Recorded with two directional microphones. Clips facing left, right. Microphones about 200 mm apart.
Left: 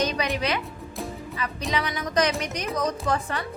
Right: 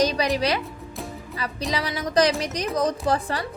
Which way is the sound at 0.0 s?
35° right (ahead or behind).